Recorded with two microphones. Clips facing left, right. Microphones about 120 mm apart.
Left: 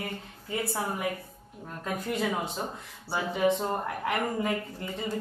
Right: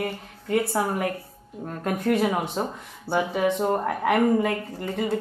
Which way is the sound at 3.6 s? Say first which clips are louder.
Right 7 dB; 85° right.